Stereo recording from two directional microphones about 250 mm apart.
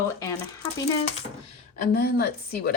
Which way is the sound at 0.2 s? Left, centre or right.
Centre.